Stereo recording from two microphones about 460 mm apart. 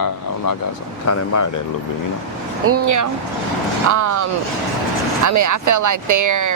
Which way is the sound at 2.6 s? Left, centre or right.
Right.